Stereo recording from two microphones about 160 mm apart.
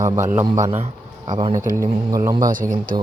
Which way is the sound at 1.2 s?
25° right (ahead or behind).